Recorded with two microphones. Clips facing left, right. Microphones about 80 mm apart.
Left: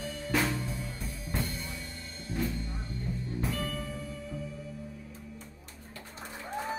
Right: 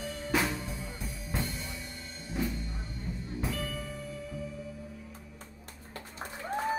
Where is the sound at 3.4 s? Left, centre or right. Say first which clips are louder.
Even; centre.